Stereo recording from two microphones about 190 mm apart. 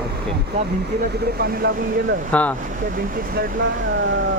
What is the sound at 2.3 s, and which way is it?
Speech, 5° left (ahead or behind).